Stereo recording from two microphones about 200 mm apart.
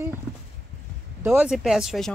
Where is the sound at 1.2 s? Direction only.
5° right (ahead or behind).